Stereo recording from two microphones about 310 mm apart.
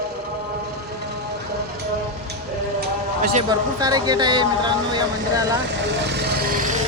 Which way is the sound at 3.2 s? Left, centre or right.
Right.